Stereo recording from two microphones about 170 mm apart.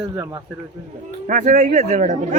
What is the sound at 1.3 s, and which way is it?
Speech, 50° right (ahead or behind).